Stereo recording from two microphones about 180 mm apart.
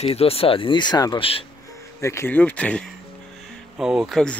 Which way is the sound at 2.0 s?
15° left (ahead or behind).